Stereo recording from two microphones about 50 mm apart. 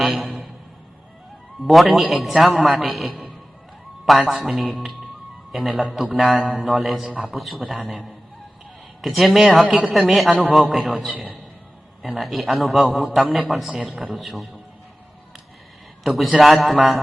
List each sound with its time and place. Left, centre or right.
0.0 s a sound: centre
1.6 s a man's voice: centre
4.3 s a man's voice: centre
7.1 s a man's voice: right
7.3 s a man's voice: centre
9.6 s a man's voice: centre
10.1 s a man's voice: centre
16.0 s a man's voice: centre